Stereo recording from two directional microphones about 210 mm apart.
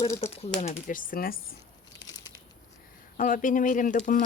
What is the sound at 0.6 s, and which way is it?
Speech, 35° left (ahead or behind).